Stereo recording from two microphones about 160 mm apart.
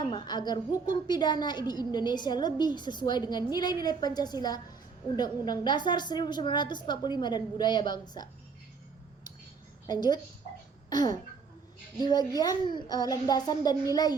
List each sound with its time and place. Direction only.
0.0 s a woman's voice: 25° left (ahead or behind)
9.8 s a child's voice: 25° left (ahead or behind)
10.8 s a sound: 25° left (ahead or behind)
11.9 s a woman's voice: 25° left (ahead or behind)